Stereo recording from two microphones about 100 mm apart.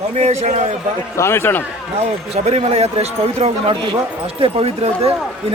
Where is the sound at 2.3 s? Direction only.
90° right.